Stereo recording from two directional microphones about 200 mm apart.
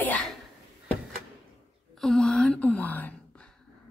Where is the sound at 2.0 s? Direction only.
Centre (ahead or behind).